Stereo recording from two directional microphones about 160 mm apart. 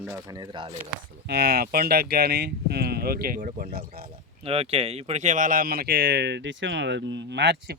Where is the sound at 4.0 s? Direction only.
35° right (ahead or behind).